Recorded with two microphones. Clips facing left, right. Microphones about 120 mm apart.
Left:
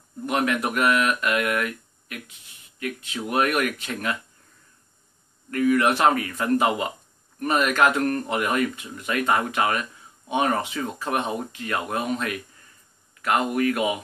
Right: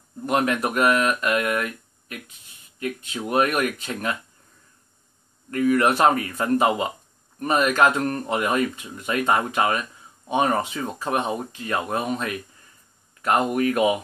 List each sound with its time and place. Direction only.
0.3 s speech: 35° right (ahead or behind)
5.5 s speech: 30° right (ahead or behind)